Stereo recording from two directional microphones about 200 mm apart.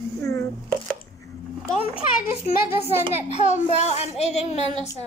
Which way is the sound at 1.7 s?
30° left (ahead or behind).